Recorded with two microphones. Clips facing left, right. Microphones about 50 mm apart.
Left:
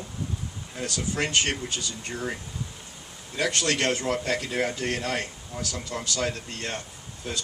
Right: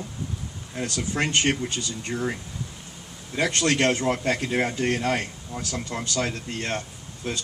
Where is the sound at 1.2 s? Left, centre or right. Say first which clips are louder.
Right 3 dB; right.